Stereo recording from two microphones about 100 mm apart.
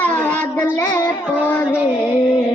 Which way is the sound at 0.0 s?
15° left (ahead or behind).